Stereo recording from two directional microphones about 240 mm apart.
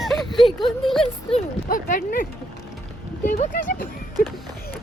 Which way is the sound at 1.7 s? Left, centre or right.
Left.